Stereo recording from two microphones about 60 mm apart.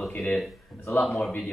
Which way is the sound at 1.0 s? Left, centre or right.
Centre.